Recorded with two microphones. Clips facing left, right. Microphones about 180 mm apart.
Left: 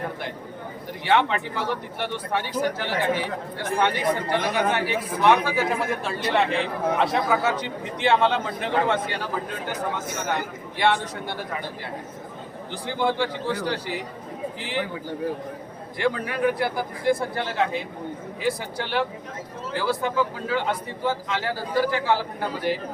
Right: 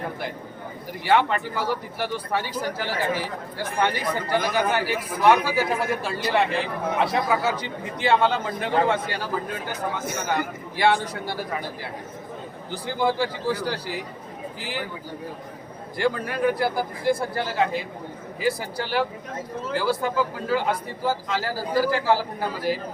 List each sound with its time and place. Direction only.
1.0 s speech: 5° right (ahead or behind)
10.8 s speech: 5° right (ahead or behind)
13.0 s speech: 5° right (ahead or behind)
16.0 s speech: centre (ahead or behind)